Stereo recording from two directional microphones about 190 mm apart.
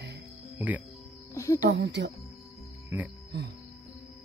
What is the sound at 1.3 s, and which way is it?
Speech, 15° left (ahead or behind).